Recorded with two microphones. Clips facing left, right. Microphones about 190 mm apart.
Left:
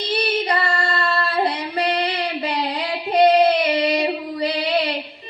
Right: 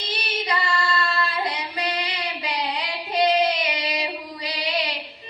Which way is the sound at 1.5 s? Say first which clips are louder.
Left 6 dB; 60° left (ahead or behind).